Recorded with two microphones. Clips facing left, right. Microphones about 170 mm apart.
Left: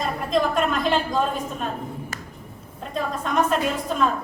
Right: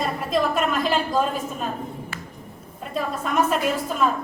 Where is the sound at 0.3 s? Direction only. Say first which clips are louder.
Left 1 dB; 5° right (ahead or behind).